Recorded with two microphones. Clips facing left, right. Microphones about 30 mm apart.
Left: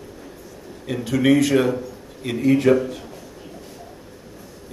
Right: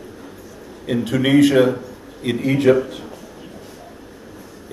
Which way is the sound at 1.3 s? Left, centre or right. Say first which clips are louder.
Right 3 dB; right.